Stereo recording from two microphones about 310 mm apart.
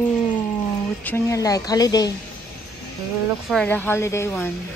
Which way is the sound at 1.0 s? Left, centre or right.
Centre.